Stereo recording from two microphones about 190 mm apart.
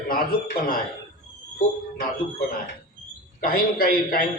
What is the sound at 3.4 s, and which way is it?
Speech, 50° left (ahead or behind).